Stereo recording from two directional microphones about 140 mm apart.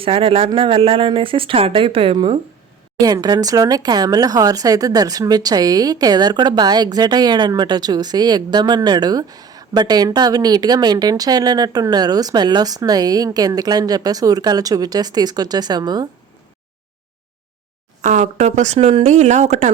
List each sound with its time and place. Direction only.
0.0 s speech: 40° right (ahead or behind)
3.0 s speech: 25° right (ahead or behind)
18.0 s speech: 60° right (ahead or behind)